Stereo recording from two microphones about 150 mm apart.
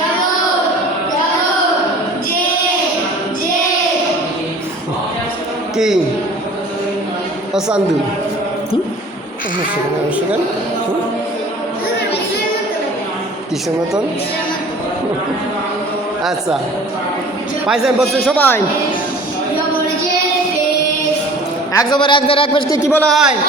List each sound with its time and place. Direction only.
5.7 s a man's voice: centre (ahead or behind)
17.7 s a man's voice: centre (ahead or behind)
18.3 s speech: 15° left (ahead or behind)
21.7 s a man's voice: 25° left (ahead or behind)
22.9 s speech: 10° left (ahead or behind)